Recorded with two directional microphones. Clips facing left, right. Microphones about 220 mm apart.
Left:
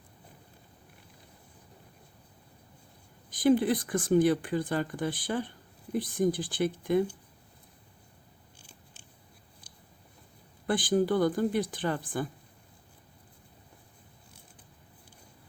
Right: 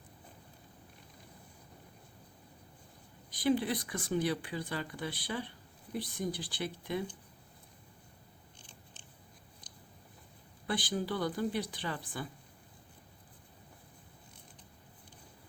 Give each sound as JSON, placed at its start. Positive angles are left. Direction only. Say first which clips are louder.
{"t": 3.2, "sound": "speech", "louder": "left 7 dB", "side_deg": 50}
{"t": 8.5, "sound": "biting", "louder": "left 2 dB", "side_deg": 10}
{"t": 10.7, "sound": "speech", "louder": "left 9 dB", "side_deg": 50}